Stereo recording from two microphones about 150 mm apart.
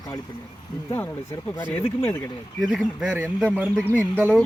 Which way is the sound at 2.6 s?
Centre (ahead or behind).